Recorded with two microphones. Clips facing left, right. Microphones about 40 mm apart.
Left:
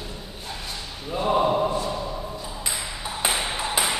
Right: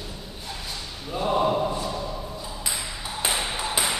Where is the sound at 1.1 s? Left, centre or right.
Centre.